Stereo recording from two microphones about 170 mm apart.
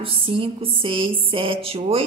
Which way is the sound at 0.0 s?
30° right (ahead or behind).